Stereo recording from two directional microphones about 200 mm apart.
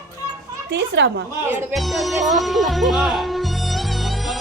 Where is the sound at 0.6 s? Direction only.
60° right (ahead or behind).